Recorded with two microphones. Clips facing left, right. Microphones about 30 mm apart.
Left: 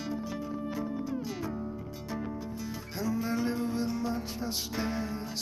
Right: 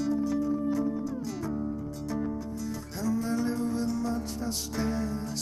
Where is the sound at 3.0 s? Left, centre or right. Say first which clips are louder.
Right 2 dB; centre.